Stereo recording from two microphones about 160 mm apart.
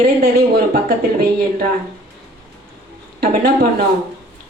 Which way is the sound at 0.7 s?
70° right (ahead or behind).